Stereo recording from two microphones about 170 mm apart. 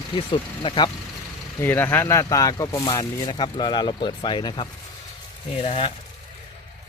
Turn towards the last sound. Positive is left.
turn(degrees=35)  # may be behind; listen again after turning